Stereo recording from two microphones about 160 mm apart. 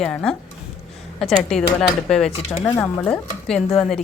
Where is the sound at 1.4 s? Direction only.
5° left (ahead or behind).